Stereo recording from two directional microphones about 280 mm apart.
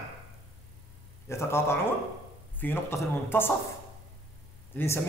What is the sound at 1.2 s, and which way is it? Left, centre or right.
A man's voice, centre.